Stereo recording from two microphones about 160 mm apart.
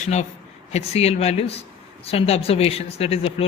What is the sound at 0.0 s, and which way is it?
A man's voice, 45° left (ahead or behind).